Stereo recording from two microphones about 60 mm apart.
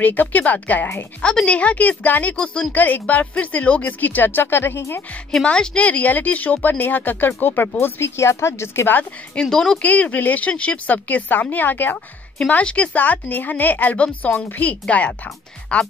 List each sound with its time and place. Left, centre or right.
0.0 s speech: left
1.2 s speech: centre; by 5.0 s left
5.4 s speech: centre; by 7.7 s left
7.8 s speech: left
9.3 s speech: centre
9.8 s speech: left